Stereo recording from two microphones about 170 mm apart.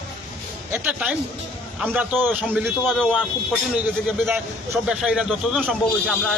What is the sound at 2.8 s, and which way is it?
Speech, 5° left (ahead or behind).